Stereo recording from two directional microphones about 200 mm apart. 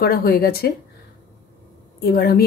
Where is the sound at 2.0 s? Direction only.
50° left (ahead or behind).